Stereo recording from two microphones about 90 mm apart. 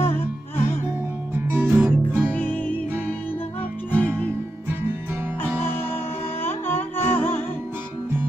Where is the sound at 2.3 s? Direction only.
20° left (ahead or behind).